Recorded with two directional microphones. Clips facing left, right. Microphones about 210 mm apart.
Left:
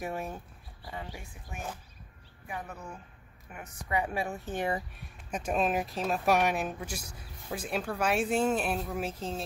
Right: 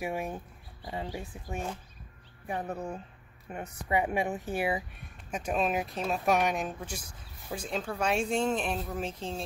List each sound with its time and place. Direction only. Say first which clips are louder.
0.0 s a woman's voice: right 2 dB; 10° right (ahead or behind)
2.4 s a woman's voice: right 6 dB; 35° right (ahead or behind); by 4.6 s 20° right (ahead or behind)
4.6 s speech: left 1 dB; 10° right (ahead or behind)